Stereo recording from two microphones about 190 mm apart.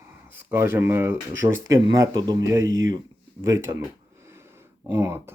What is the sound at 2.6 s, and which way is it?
Speech, 90° right.